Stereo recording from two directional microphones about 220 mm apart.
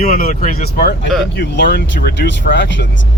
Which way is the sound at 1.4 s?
50° left (ahead or behind).